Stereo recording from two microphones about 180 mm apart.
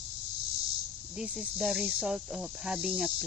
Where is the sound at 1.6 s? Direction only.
Centre (ahead or behind).